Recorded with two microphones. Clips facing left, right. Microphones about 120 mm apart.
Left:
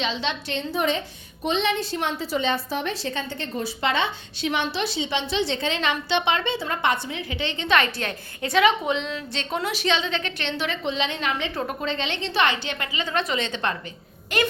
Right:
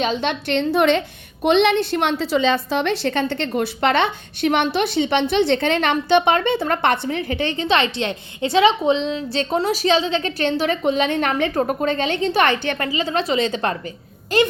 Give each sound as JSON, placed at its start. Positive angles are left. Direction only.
{"t": 0.0, "sound": "a woman's voice", "side_deg": -50}
{"t": 12.8, "sound": "a woman's voice", "side_deg": -35}